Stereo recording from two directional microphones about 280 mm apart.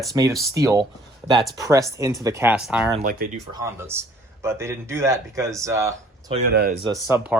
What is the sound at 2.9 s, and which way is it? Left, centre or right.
Speech, right.